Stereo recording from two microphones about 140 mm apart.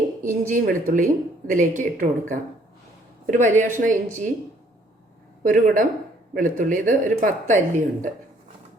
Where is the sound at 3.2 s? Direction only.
65° right (ahead or behind).